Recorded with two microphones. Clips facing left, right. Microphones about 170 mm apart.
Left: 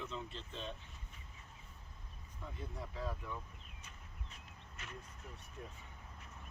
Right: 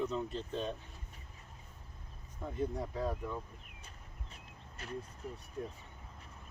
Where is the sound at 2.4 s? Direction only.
45° right (ahead or behind).